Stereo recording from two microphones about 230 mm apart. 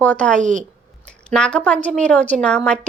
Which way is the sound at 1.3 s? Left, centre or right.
Centre.